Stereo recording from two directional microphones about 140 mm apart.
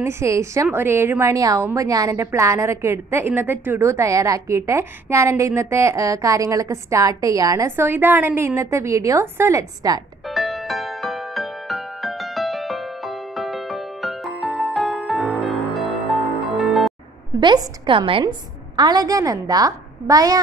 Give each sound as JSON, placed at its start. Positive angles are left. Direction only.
{"t": 0.0, "sound": "a woman's voice", "side_deg": -20}
{"t": 10.3, "sound": "music", "side_deg": 0}
{"t": 17.4, "sound": "a woman's voice", "side_deg": -35}
{"t": 18.8, "sound": "a woman's voice", "side_deg": -30}